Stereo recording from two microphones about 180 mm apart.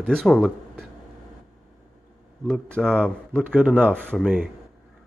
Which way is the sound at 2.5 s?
5° left (ahead or behind).